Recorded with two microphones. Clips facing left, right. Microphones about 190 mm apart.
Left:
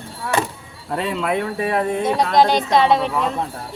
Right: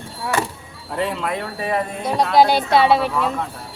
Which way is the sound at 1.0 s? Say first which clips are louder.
Left 1 dB; 60° left (ahead or behind).